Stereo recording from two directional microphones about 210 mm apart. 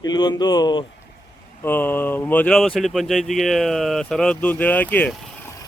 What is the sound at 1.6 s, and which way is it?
Speech, 10° left (ahead or behind).